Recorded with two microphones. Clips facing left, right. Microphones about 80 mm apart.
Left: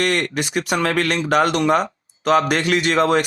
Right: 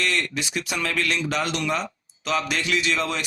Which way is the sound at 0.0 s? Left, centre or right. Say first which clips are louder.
Left 6 dB; left.